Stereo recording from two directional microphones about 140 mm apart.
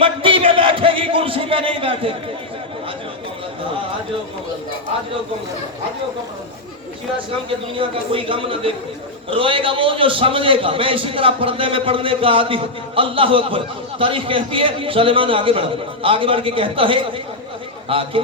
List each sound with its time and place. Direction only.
0.0 s music: 40° right (ahead or behind)
7.8 s a man's voice: 40° right (ahead or behind)